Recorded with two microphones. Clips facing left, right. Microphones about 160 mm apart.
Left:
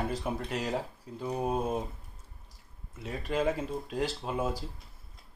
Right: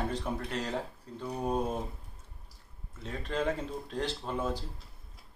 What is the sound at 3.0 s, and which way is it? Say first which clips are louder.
Speech: left 2 dB; 10° left (ahead or behind).